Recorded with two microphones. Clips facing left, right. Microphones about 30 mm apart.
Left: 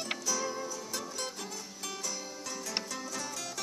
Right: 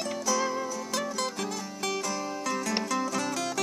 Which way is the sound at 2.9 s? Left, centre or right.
Right.